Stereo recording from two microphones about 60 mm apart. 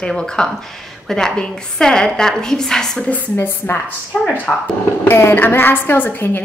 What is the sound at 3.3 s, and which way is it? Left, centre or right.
Speech, left.